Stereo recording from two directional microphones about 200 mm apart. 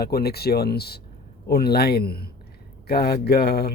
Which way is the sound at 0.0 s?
50° left (ahead or behind).